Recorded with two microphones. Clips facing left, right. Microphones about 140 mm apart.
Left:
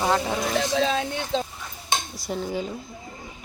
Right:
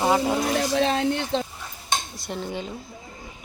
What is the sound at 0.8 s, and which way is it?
Speech, 60° right (ahead or behind).